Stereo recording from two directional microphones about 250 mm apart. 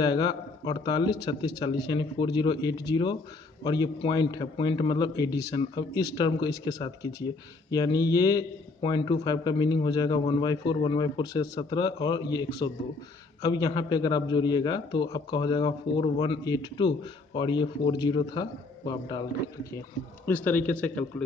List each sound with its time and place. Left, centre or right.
0.0 s a man's voice: centre